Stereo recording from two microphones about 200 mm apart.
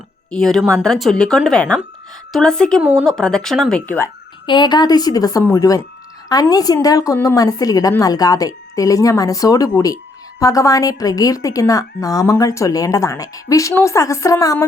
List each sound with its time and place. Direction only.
0.3 s speech: 5° left (ahead or behind)
4.4 s a woman's voice: 20° left (ahead or behind)